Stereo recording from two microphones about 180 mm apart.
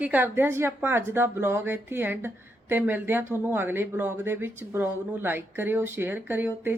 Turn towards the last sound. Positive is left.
turn(degrees=-10)  # may be behind; listen again after turning